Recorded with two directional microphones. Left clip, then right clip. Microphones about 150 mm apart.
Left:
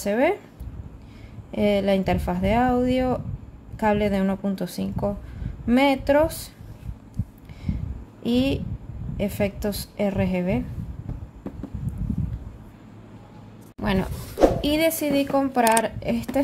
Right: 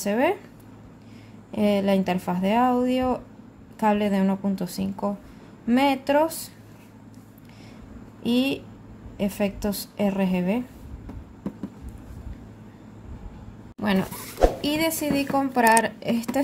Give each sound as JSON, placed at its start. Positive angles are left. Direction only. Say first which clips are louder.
{"t": 0.0, "sound": "speech", "louder": "left 1 dB", "side_deg": 15}
{"t": 1.5, "sound": "speech", "louder": "left 1 dB", "side_deg": 15}
{"t": 8.2, "sound": "a woman's voice", "louder": "left 1 dB", "side_deg": 10}
{"t": 13.7, "sound": "a sound", "louder": "even", "side_deg": 5}
{"t": 14.6, "sound": "a woman's voice", "louder": "left 3 dB", "side_deg": 20}